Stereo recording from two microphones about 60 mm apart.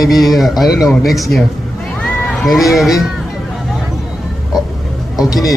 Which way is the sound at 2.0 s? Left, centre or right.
Centre.